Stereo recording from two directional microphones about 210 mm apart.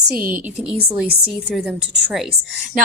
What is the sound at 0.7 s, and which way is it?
A woman's voice, 5° right (ahead or behind).